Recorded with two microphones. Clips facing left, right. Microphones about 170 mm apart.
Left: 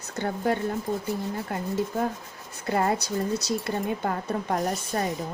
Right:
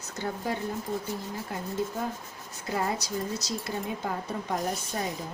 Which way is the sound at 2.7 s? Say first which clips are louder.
Left 5 dB; 60° left (ahead or behind).